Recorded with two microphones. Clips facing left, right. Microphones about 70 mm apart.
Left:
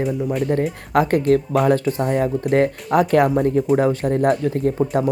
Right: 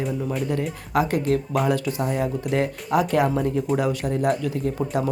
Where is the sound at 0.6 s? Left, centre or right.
Left.